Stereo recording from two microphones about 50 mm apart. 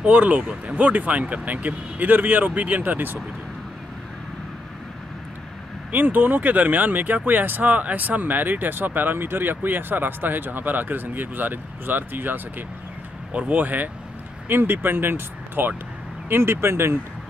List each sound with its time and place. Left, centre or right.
0.0 s speech: right
0.4 s speech: right
5.9 s speech: right
14.5 s speech: right